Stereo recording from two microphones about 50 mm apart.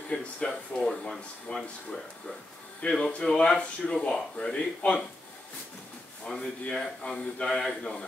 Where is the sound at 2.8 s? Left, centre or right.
Left.